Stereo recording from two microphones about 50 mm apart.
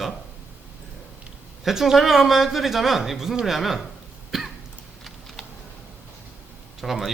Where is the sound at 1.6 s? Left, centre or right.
Centre.